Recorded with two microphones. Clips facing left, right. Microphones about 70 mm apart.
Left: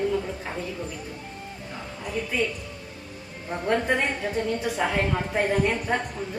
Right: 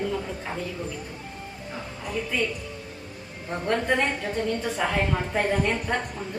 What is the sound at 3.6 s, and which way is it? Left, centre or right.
Speech, centre.